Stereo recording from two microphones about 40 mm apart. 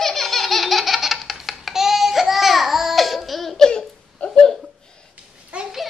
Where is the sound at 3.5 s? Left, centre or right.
Centre.